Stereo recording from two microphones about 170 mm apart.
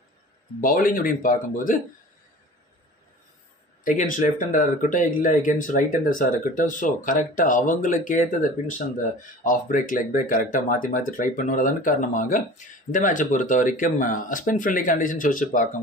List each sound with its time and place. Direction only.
0.6 s speech: 55° left (ahead or behind)
3.8 s speech: 50° left (ahead or behind)